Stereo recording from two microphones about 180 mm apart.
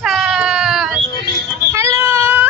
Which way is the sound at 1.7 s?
15° right (ahead or behind).